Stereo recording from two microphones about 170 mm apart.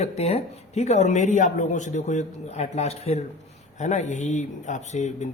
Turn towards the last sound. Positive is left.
turn(degrees=45)  # may be behind; listen again after turning